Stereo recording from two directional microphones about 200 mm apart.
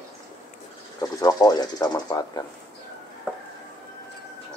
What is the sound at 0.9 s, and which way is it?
Speech, 20° left (ahead or behind).